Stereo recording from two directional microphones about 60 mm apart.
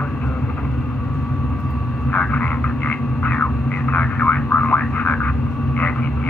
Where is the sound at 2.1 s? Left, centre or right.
Left.